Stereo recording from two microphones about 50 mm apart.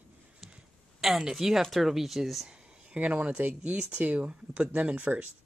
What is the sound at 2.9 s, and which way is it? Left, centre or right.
Speech, right.